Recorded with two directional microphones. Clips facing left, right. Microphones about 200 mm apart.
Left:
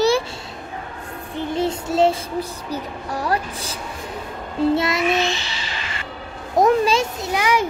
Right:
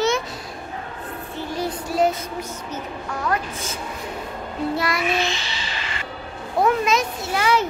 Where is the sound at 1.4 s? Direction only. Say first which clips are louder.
Left 5 dB; 25° left (ahead or behind).